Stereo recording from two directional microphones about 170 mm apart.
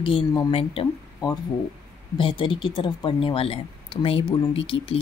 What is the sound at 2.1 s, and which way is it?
Speech, 30° left (ahead or behind).